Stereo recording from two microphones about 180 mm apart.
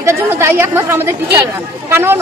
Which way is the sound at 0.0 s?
15° right (ahead or behind).